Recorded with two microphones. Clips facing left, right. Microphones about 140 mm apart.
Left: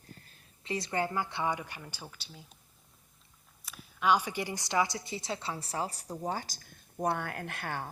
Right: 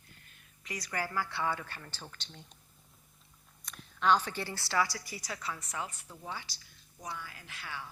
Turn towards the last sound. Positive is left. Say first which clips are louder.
# left 7 dB
turn(degrees=50)  # may be behind; listen again after turning